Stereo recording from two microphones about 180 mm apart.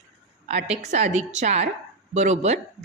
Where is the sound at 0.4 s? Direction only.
35° right (ahead or behind).